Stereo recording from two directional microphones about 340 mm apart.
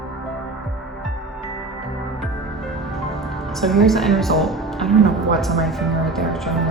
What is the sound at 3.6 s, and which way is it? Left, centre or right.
Speech, centre.